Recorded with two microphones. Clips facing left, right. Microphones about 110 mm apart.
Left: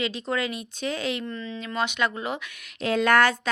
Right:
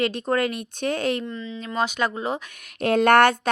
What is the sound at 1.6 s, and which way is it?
Speech, 35° right (ahead or behind).